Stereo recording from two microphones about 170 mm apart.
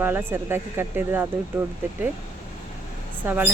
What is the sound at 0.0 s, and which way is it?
Speech, 10° right (ahead or behind).